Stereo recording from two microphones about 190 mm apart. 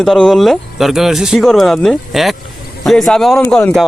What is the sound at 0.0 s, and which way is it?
Speech, centre (ahead or behind).